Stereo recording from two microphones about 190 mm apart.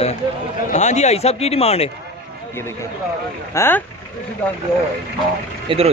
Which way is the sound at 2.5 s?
15° left (ahead or behind).